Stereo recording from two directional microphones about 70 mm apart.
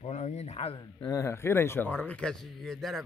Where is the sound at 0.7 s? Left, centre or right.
Left.